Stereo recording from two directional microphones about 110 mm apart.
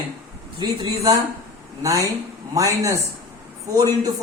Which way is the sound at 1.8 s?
30° right (ahead or behind).